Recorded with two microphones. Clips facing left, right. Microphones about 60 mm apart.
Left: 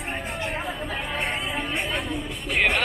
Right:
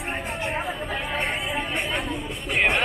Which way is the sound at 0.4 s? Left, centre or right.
Centre.